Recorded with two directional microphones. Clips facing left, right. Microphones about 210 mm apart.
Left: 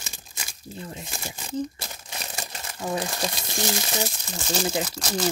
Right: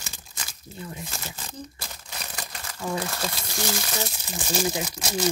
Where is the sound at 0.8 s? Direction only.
30° left (ahead or behind).